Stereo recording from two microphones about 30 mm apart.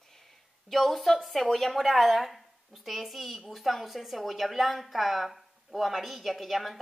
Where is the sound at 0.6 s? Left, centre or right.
Centre.